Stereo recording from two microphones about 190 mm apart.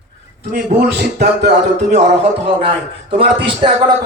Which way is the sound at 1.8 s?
35° right (ahead or behind).